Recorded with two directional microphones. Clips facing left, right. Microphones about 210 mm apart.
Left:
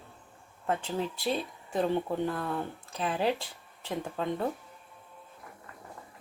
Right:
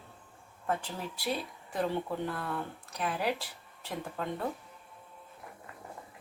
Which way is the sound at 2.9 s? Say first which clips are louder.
Left 3 dB; 25° left (ahead or behind).